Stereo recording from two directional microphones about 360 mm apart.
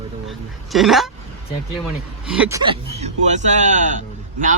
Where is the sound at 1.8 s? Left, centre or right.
Centre.